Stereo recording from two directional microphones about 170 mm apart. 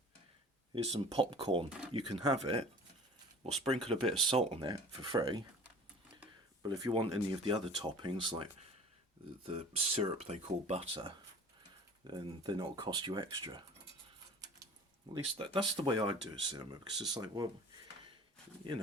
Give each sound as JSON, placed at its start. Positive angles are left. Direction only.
{"t": 0.7, "sound": "speech", "side_deg": -35}
{"t": 6.6, "sound": "speech", "side_deg": -25}
{"t": 15.1, "sound": "speech", "side_deg": -30}